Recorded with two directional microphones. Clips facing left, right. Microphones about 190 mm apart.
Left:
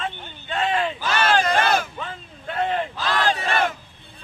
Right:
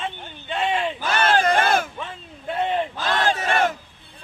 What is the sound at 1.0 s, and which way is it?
Battle cry, 50° right (ahead or behind).